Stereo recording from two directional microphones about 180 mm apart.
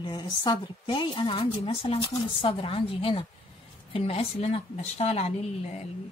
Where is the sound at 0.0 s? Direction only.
25° left (ahead or behind).